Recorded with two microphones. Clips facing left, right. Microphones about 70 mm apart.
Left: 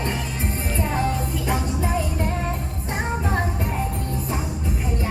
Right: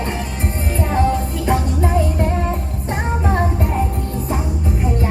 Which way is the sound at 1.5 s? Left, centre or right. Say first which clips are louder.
Right 7 dB; centre.